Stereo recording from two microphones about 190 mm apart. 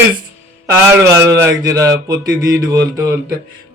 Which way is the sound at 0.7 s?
15° right (ahead or behind).